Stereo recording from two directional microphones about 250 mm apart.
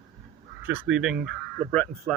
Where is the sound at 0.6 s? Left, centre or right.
Centre.